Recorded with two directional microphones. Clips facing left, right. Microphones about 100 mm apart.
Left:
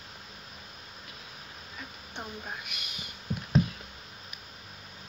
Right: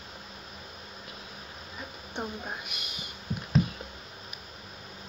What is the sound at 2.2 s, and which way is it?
Speech, 15° right (ahead or behind).